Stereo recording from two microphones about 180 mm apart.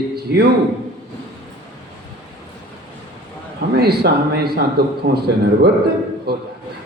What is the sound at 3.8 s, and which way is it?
A woman's voice, 60° right (ahead or behind).